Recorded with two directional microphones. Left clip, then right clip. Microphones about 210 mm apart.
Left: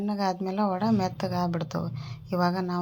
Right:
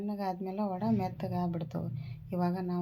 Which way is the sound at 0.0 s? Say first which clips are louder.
Left 7 dB; 20° left (ahead or behind).